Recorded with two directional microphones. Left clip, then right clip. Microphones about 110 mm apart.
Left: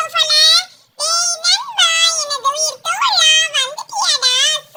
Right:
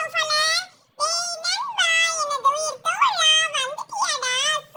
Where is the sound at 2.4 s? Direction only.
5° left (ahead or behind).